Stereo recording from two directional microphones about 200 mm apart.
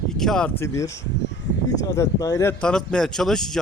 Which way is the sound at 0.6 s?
15° left (ahead or behind).